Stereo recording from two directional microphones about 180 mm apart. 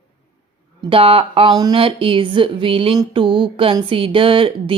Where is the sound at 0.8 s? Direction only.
30° right (ahead or behind).